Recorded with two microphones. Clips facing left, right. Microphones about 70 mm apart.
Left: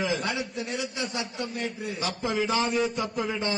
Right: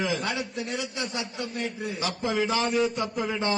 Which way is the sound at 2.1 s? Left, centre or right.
Centre.